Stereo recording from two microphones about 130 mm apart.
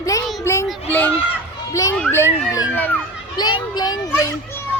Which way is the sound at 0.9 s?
15° left (ahead or behind).